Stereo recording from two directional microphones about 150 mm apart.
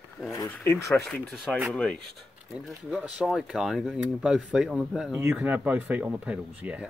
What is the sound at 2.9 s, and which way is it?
Speech, 5° right (ahead or behind).